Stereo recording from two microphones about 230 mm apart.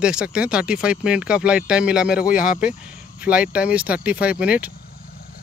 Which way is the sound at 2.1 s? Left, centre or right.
Left.